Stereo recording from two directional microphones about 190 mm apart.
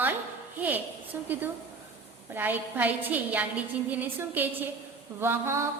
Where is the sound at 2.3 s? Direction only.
10° right (ahead or behind).